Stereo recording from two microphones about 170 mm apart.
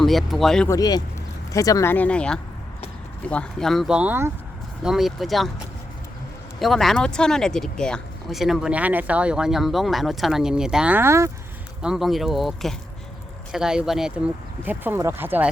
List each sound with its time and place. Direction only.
0.0 s speech: centre (ahead or behind)
0.7 s speech: 20° left (ahead or behind); by 5.5 s centre (ahead or behind)
6.6 s speech: centre (ahead or behind); by 11.3 s 15° right (ahead or behind)
11.8 s speech: 5° right (ahead or behind)